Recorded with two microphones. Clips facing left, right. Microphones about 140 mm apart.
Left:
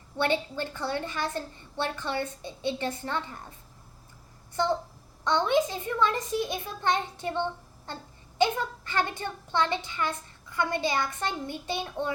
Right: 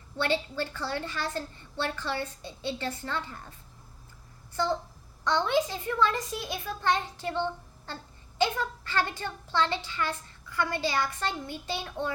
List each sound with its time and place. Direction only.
0.2 s a child's voice: 20° left (ahead or behind)
5.2 s a child's voice: 20° left (ahead or behind)